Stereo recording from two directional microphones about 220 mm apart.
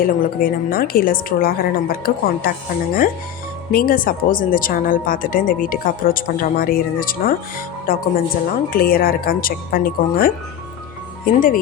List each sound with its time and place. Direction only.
0.0 s speech: 40° left (ahead or behind)
3.7 s speech: 40° left (ahead or behind)